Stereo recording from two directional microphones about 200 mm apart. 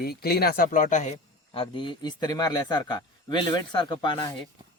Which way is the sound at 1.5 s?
25° left (ahead or behind).